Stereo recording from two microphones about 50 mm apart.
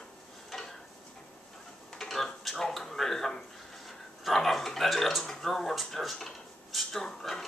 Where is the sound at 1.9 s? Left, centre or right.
Centre.